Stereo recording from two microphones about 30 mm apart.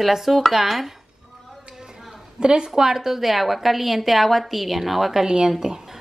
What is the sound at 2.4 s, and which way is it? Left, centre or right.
Speech, right.